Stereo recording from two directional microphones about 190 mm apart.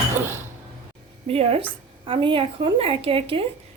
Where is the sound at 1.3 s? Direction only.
30° right (ahead or behind).